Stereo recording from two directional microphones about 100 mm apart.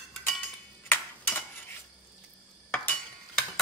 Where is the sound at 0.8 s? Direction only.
20° left (ahead or behind).